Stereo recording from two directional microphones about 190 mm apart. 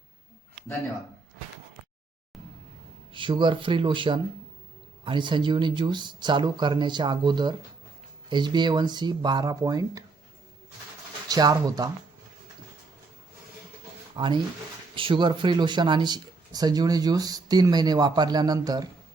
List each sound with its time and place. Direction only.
3.1 s speech: 25° right (ahead or behind)
11.3 s speech: 20° right (ahead or behind)
14.2 s speech: 25° right (ahead or behind)